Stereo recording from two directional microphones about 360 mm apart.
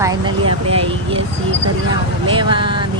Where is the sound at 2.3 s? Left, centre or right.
Centre.